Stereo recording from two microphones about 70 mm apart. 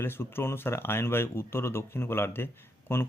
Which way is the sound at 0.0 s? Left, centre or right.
Left.